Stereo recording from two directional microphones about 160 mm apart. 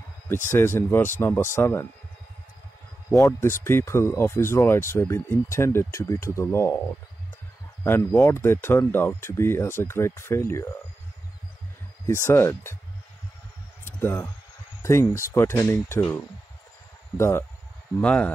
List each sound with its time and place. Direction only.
0.5 s speech: 15° left (ahead or behind)
3.1 s speech: 20° left (ahead or behind)
7.8 s speech: 15° left (ahead or behind)
12.1 s speech: 15° left (ahead or behind)
13.8 s a sound: 15° left (ahead or behind)
14.8 s speech: 15° left (ahead or behind)